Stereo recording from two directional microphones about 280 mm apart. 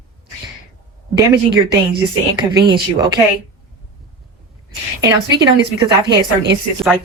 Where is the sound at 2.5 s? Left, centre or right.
Centre.